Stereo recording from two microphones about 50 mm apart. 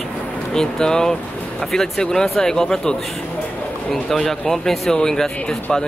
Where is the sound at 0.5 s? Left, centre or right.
Centre.